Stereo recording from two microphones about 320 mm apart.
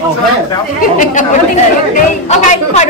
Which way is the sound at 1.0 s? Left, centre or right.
Left.